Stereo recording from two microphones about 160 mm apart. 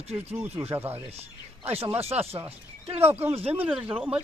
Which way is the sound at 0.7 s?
15° right (ahead or behind).